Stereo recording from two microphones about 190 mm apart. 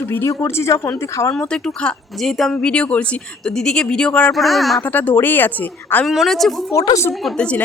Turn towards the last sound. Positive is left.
turn(degrees=5)  # may be behind; listen again after turning